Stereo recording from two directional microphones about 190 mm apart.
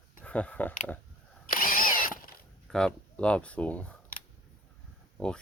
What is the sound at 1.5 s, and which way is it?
Drill, 50° left (ahead or behind).